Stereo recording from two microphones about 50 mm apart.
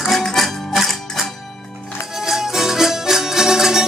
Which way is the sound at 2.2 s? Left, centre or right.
Centre.